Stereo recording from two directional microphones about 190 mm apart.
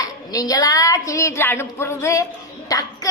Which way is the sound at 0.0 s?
20° left (ahead or behind).